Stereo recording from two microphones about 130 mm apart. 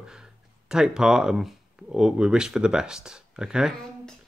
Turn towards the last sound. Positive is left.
turn(degrees=-5)  # may be behind; listen again after turning